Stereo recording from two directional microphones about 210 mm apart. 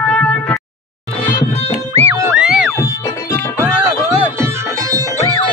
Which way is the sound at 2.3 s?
5° right (ahead or behind).